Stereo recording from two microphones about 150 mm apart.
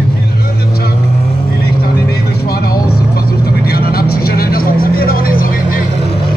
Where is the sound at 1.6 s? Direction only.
90° left; by 5.8 s 75° left (ahead or behind).